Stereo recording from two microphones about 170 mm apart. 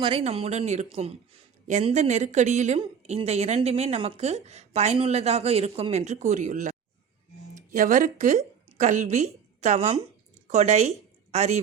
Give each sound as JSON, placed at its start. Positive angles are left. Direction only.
{"t": 0.0, "sound": "a woman's voice", "side_deg": -35}